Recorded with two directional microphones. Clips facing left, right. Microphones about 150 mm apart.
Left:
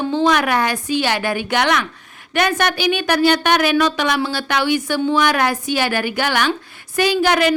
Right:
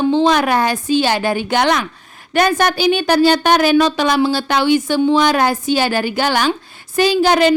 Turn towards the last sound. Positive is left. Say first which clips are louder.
# right 3 dB
turn(degrees=-30)  # may be behind; listen again after turning